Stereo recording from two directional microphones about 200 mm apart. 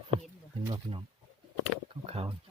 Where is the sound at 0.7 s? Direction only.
25° right (ahead or behind).